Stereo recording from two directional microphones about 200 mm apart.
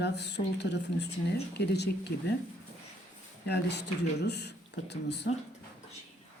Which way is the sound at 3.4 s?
55° left (ahead or behind).